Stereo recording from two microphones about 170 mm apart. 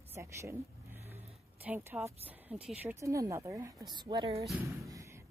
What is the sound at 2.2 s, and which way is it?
A woman's voice, 10° right (ahead or behind).